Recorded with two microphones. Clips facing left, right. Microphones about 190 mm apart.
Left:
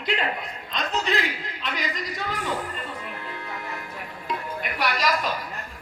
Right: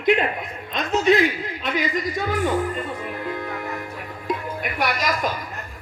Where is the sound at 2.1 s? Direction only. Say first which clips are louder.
Right 8 dB; 45° right (ahead or behind).